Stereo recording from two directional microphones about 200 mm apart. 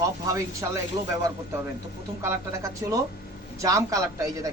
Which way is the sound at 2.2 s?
15° right (ahead or behind).